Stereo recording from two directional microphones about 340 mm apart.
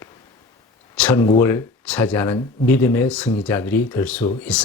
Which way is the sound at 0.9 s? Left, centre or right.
Centre.